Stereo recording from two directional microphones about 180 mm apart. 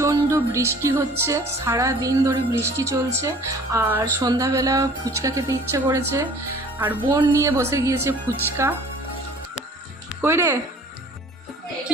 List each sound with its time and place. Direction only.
0.0 s music: 15° right (ahead or behind)
6.7 s speech: 10° right (ahead or behind)
7.1 s music: 20° right (ahead or behind)
10.2 s speech: 15° right (ahead or behind)